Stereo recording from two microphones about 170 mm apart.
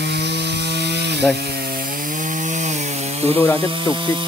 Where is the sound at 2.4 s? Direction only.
45° right (ahead or behind).